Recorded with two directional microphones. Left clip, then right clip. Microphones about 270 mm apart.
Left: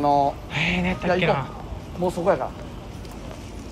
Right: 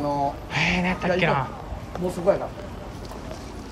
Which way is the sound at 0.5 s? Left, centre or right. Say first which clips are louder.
Right 1 dB; centre.